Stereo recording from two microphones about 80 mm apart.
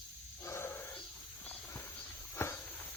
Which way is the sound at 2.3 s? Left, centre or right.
Left.